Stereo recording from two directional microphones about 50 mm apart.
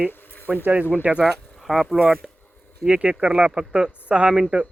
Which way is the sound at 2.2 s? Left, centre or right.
Centre.